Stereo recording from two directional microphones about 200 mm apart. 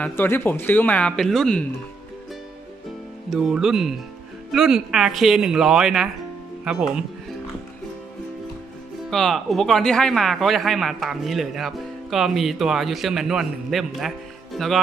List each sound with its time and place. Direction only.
0.0 s speech: 10° left (ahead or behind)
3.3 s speech: centre (ahead or behind)
9.1 s speech: centre (ahead or behind)